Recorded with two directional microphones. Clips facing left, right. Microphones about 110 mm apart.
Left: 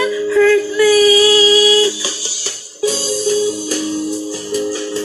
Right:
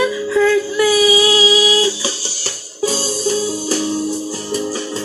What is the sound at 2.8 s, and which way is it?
Music, 35° right (ahead or behind).